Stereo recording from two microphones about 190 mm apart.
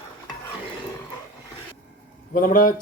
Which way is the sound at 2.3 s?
45° left (ahead or behind).